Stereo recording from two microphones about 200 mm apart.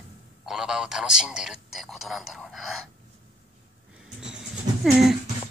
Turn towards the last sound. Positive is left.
turn(degrees=0)  # may be behind; listen again after turning